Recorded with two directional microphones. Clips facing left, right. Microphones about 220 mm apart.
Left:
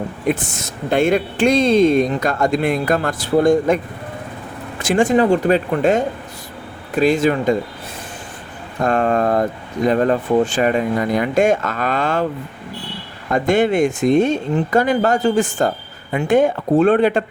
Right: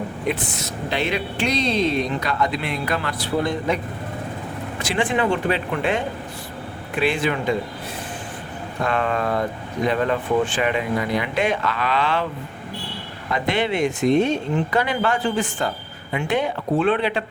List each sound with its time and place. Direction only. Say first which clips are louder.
0.3 s speech: left 5 dB; 50° left (ahead or behind)
4.8 s speech: left 7 dB; 45° left (ahead or behind)
8.8 s speech: left 6 dB; 45° left (ahead or behind)
13.3 s speech: left 7 dB; 45° left (ahead or behind)